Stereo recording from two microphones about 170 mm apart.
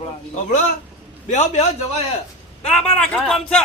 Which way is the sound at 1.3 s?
45° left (ahead or behind).